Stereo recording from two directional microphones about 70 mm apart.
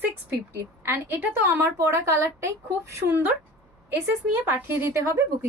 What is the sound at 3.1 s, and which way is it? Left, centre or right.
Speech, right.